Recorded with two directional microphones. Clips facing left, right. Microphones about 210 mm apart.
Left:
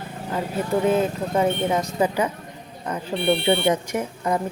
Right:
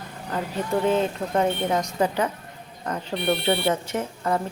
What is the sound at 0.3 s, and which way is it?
A woman's voice, 5° left (ahead or behind).